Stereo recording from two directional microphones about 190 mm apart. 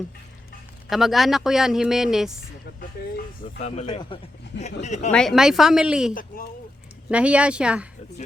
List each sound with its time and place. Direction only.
0.9 s a man's voice: centre (ahead or behind)
3.6 s speech: 35° left (ahead or behind)
5.1 s a man's voice: centre (ahead or behind)
6.1 s speech: 50° left (ahead or behind)
7.1 s speech: 5° right (ahead or behind)